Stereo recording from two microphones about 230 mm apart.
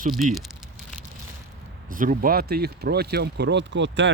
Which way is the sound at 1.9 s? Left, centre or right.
Right.